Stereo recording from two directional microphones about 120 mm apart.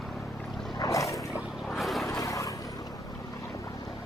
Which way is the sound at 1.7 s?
Centre (ahead or behind).